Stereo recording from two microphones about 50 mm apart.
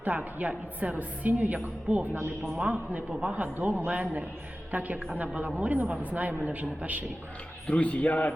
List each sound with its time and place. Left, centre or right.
0.3 s a woman's voice: right
2.1 s a woman's voice: right
2.6 s a man's voice: right
7.7 s a man's voice: left